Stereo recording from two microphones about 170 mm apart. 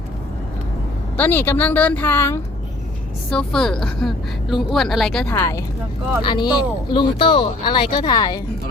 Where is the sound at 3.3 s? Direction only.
5° left (ahead or behind).